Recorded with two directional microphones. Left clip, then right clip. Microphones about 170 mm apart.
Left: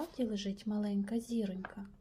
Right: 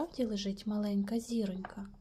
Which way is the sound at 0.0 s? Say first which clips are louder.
Right 2 dB; 20° right (ahead or behind).